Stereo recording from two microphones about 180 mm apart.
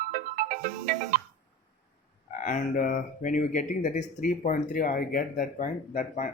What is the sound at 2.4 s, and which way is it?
Speech, 45° left (ahead or behind).